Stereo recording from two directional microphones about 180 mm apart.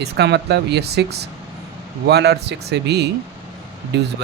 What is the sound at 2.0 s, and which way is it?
Speech, 65° right (ahead or behind).